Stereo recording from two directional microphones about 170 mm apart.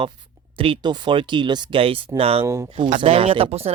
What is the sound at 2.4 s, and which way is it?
Speech, 15° right (ahead or behind).